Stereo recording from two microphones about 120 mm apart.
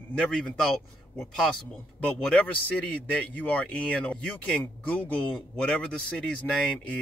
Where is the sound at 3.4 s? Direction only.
10° left (ahead or behind).